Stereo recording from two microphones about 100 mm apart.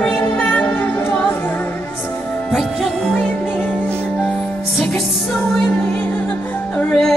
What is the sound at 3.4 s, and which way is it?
Music, 20° left (ahead or behind).